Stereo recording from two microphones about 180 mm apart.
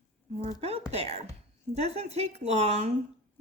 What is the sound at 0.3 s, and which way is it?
Speech, 35° right (ahead or behind).